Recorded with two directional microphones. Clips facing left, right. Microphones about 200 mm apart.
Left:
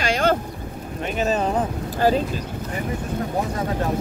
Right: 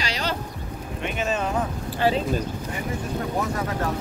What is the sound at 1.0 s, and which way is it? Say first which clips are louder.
Speech: left 4 dB; 40° left (ahead or behind).